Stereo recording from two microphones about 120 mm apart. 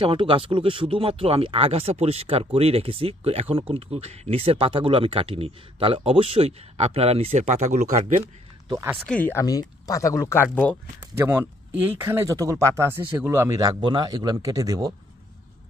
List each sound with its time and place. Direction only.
0.0 s speech: 45° right (ahead or behind)
7.4 s speech: 80° right
9.0 s speech: 10° left (ahead or behind)
9.3 s speech: 30° left (ahead or behind)
10.5 s speech: 15° left (ahead or behind)
11.1 s a man's voice: 20° right (ahead or behind)